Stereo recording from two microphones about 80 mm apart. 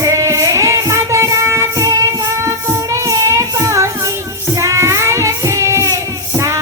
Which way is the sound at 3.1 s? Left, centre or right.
Right.